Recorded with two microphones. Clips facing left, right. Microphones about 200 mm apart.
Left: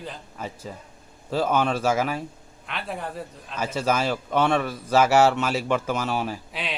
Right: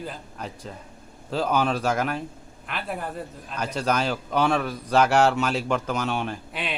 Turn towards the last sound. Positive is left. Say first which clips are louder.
# even
turn(degrees=0)  # may be behind; listen again after turning